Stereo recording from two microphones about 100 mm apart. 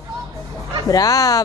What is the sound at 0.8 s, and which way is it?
Speech, 35° left (ahead or behind).